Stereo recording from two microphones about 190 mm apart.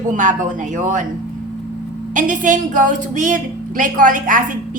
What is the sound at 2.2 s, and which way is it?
A woman's voice, 40° right (ahead or behind).